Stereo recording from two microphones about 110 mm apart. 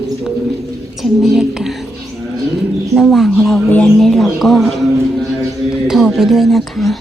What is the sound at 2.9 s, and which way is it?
Speech, centre (ahead or behind).